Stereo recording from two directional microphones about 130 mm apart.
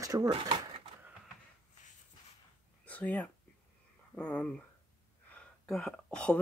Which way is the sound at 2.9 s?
10° left (ahead or behind).